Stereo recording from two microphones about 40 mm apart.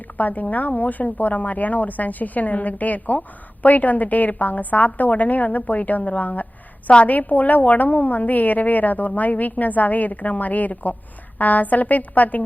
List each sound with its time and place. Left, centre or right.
0.2 s a woman's voice: left